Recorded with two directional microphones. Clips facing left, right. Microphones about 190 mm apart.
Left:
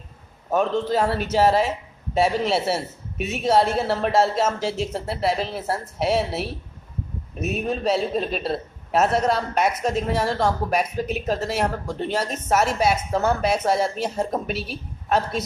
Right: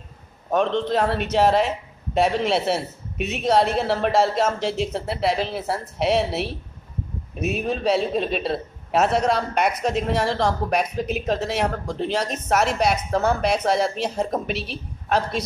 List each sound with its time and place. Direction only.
0.5 s a woman's voice: 5° left (ahead or behind)